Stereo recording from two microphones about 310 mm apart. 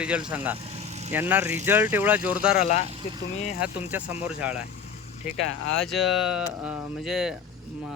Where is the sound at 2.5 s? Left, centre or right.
Left.